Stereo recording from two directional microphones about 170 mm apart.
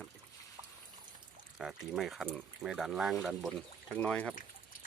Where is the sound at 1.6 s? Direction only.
Centre (ahead or behind).